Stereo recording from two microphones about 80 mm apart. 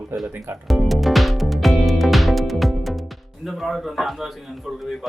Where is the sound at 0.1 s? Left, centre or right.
Right.